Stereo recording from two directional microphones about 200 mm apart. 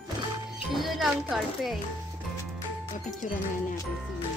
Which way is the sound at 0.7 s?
Centre (ahead or behind).